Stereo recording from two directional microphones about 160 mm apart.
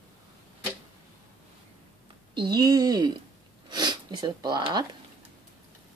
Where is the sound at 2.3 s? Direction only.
25° right (ahead or behind).